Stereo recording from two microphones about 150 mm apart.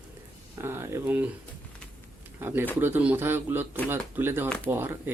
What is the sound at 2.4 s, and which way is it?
Speech, 15° right (ahead or behind).